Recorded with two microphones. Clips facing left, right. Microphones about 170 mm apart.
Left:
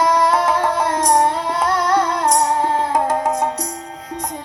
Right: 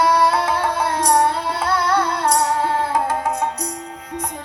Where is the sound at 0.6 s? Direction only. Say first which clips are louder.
Left 2 dB; 45° left (ahead or behind).